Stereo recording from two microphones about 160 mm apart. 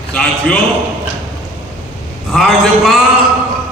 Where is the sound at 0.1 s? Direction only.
5° left (ahead or behind).